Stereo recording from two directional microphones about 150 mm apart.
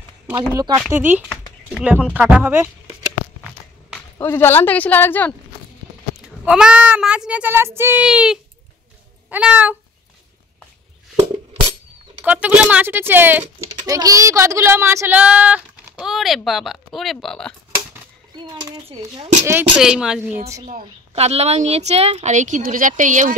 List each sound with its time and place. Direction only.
0.3 s speech: 20° right (ahead or behind)
0.9 s speech: 15° right (ahead or behind)
4.2 s a woman's voice: 15° left (ahead or behind)
6.2 s speech: 5° right (ahead or behind)
12.3 s speech: 10° right (ahead or behind)
13.9 s speech: 25° right (ahead or behind); by 17.6 s 5° left (ahead or behind)
18.9 s speech: 45° right (ahead or behind)
19.8 s speech: 5° right (ahead or behind)
21.1 s speech: 45° right (ahead or behind)